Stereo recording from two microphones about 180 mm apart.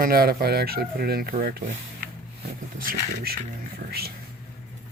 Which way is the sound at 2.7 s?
50° right (ahead or behind).